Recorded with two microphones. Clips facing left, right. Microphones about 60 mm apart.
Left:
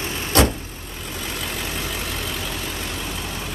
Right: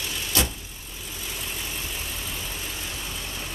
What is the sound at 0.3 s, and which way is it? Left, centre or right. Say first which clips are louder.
Vehicle: left 10 dB; left.